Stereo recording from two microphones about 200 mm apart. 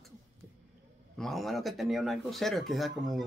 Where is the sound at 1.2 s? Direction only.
Centre (ahead or behind).